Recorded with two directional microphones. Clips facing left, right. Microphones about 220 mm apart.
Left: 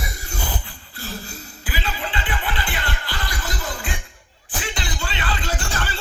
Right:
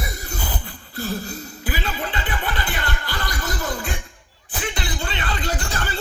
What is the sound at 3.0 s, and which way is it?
Music, 40° right (ahead or behind).